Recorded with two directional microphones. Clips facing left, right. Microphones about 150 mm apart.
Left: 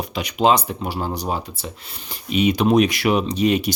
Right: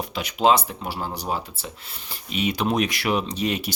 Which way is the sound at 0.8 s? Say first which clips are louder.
Left 5 dB; 15° left (ahead or behind).